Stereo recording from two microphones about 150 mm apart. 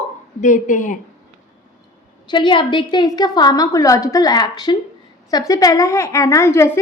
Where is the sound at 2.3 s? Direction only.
30° left (ahead or behind).